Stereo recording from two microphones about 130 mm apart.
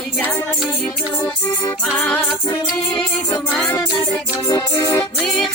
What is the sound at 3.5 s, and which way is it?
Music, 10° left (ahead or behind).